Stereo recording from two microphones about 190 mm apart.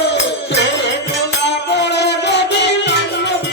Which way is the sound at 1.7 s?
65° left (ahead or behind).